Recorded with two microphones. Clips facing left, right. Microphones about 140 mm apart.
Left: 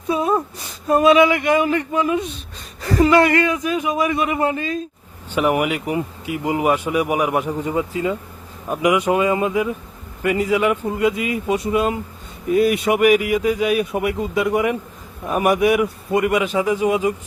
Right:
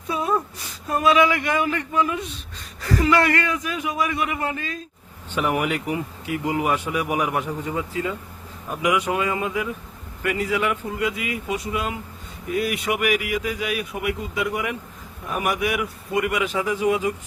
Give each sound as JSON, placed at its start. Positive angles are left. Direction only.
{"t": 0.1, "sound": "a man's voice", "side_deg": 25}